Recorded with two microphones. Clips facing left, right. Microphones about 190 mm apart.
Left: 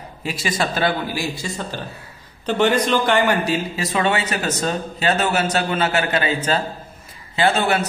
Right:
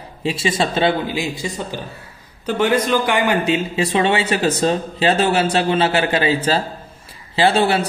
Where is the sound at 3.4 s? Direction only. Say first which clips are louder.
Right 4 dB; 25° right (ahead or behind).